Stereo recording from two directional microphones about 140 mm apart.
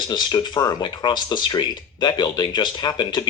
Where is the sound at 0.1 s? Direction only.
30° left (ahead or behind).